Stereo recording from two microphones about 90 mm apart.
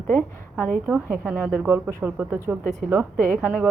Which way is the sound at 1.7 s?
25° right (ahead or behind).